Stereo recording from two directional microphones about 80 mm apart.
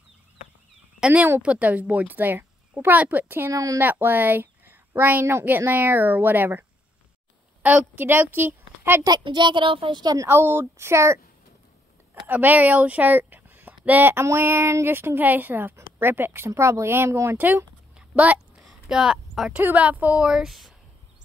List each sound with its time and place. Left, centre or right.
1.0 s a woman's voice: centre
3.5 s speech: right
3.8 s a woman's voice: right
7.6 s a woman's voice: right
9.2 s speech: right
10.2 s speech: right
12.3 s a woman's voice: right
17.9 s a sound: centre
18.6 s a sound: centre
19.5 s a woman's voice: centre